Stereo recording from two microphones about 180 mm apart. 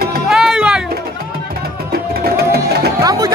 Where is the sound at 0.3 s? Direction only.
5° right (ahead or behind).